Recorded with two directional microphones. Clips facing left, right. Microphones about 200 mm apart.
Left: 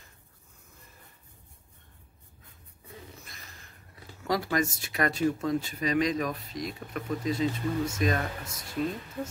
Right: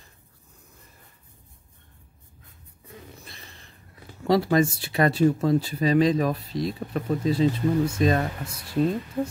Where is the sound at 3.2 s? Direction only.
30° right (ahead or behind).